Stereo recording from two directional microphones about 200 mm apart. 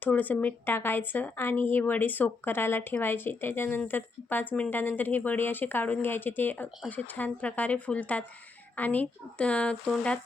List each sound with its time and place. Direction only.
0.0 s a woman's voice: 10° left (ahead or behind)